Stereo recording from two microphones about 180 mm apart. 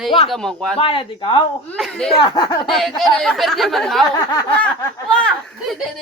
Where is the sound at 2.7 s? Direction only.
Centre (ahead or behind).